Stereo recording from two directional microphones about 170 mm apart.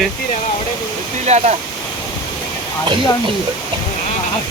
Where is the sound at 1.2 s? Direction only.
40° right (ahead or behind).